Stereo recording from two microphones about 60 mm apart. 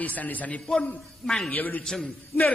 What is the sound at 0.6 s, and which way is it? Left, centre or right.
Speech, centre.